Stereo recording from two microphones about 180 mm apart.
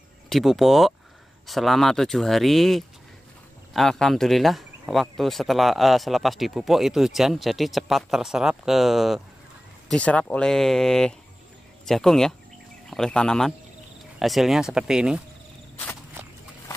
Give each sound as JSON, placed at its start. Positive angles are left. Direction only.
{"t": 0.3, "sound": "speech", "side_deg": 0}